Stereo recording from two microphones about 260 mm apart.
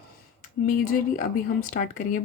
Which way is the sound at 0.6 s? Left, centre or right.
Left.